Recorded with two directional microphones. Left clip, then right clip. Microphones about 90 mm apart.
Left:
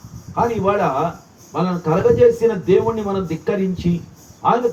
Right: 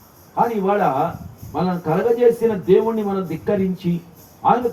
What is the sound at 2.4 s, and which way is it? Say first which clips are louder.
Speech: even; 10° left (ahead or behind).